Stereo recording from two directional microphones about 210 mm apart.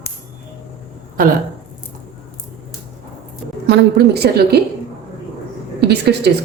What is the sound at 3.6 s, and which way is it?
Speech, 50° right (ahead or behind).